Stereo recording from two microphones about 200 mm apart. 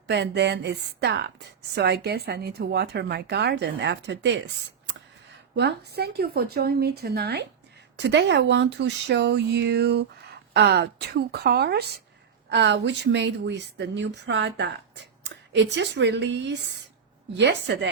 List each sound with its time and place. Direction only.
0.1 s speech: 60° right (ahead or behind)
5.5 s speech: 55° right (ahead or behind)